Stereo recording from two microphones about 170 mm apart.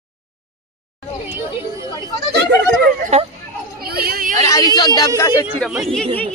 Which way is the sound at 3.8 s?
65° right (ahead or behind).